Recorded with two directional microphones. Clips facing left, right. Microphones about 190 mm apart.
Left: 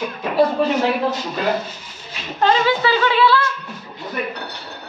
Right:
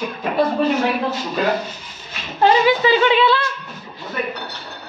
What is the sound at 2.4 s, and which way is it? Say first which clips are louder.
A woman's voice: right 2 dB; 15° right (ahead or behind).